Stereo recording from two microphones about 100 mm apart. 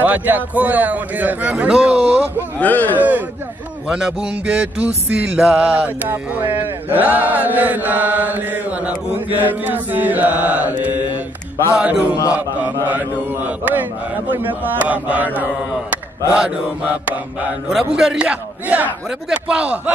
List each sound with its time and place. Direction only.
0.0 s music: 15° right (ahead or behind)
2.3 s speech: 15° left (ahead or behind)
3.0 s music: 15° right (ahead or behind)
14.3 s music: 20° right (ahead or behind)
17.6 s music: 5° right (ahead or behind)